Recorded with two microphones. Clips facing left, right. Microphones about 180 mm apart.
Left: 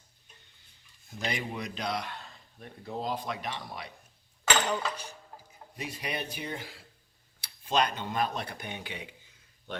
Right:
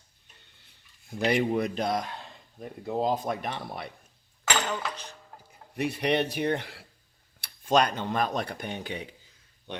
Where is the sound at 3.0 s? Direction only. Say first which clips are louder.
Right 6 dB; 45° right (ahead or behind).